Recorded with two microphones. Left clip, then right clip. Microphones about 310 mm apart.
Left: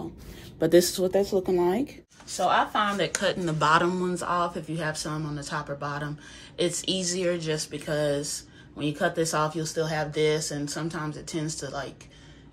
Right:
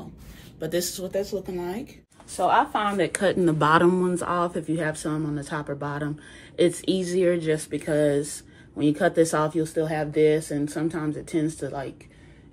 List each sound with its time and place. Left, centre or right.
0.6 s speech: left
2.3 s speech: centre